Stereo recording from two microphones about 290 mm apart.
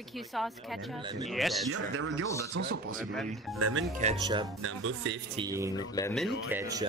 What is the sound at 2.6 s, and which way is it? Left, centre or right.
Speech, right.